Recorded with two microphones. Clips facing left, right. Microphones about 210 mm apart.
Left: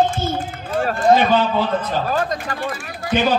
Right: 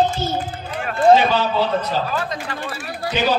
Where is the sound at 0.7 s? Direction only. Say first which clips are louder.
Right 1 dB; 45° left (ahead or behind).